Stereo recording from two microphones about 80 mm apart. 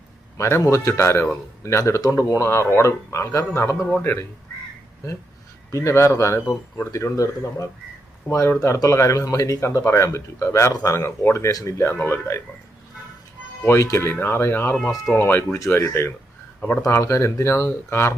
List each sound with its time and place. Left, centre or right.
0.3 s speech: left
5.7 s speech: left
13.9 s speech: left
15.5 s speech: left
16.8 s speech: left